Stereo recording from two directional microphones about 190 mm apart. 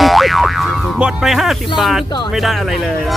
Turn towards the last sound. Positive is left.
turn(degrees=0)  # may be behind; listen again after turning